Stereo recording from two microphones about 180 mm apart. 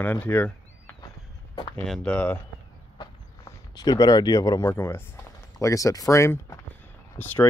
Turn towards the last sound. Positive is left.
turn(degrees=10)  # may be behind; listen again after turning